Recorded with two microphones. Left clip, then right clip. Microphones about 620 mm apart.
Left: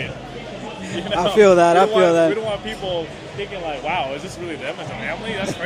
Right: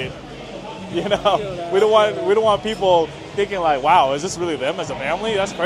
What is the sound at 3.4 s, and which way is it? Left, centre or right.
Speech, right.